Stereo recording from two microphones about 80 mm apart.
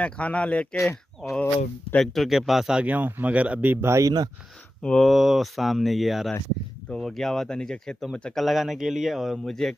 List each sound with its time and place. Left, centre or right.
0.0 s speech: centre
0.7 s speech: left
2.0 s speech: centre
2.8 s speech: right
4.0 s speech: right
4.8 s speech: centre
5.1 s speech: centre